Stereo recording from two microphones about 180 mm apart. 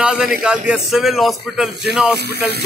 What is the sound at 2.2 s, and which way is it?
Speech, 65° right (ahead or behind).